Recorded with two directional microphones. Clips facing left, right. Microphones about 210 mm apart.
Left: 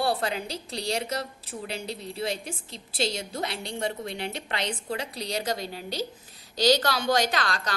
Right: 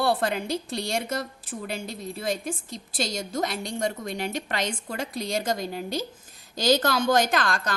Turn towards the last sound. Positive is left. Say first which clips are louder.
# right 3 dB
turn(degrees=-50)  # may be behind; listen again after turning